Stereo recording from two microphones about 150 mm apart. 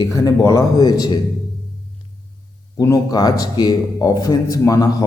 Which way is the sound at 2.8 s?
25° left (ahead or behind).